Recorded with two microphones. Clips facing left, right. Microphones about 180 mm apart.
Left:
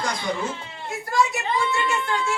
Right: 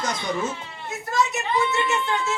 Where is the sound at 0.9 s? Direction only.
20° right (ahead or behind).